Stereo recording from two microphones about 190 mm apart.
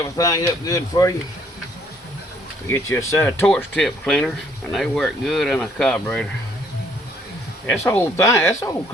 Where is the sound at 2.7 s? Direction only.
15° left (ahead or behind).